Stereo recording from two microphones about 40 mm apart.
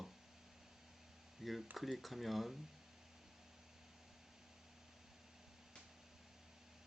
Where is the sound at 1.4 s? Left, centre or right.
Centre.